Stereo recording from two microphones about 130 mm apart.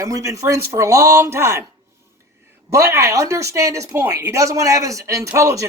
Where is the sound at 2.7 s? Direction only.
20° right (ahead or behind).